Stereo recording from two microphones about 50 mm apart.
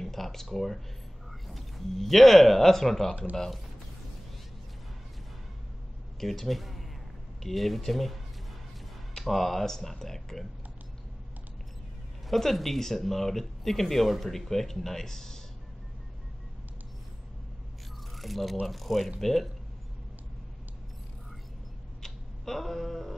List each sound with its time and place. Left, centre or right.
0.0 s speech: centre
6.1 s speech: centre
9.2 s speech: centre
12.3 s speech: centre
18.1 s speech: centre
22.0 s a sound: centre